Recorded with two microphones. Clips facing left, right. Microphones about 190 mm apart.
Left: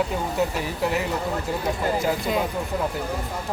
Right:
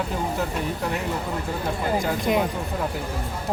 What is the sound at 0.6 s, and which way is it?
Speech, 5° left (ahead or behind).